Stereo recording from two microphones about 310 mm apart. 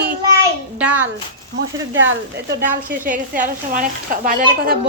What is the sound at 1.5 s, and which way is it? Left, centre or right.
Speech, right.